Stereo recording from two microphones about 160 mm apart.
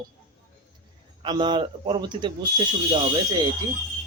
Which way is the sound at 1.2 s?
30° right (ahead or behind).